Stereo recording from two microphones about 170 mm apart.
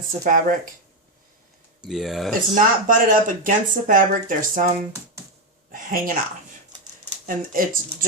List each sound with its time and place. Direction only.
0.3 s speech: 55° right (ahead or behind)
1.8 s speech: centre (ahead or behind)
2.6 s speech: 50° right (ahead or behind)
4.9 s speech: 15° right (ahead or behind)
5.7 s speech: 50° right (ahead or behind)
7.3 s speech: 55° right (ahead or behind)